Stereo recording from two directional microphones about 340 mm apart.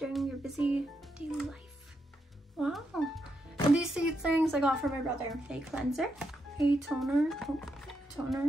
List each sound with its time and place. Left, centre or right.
0.0 s music: centre
1.2 s a child's voice: centre
2.6 s music: centre